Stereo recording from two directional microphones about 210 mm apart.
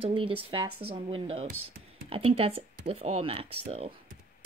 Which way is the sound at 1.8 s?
45° right (ahead or behind).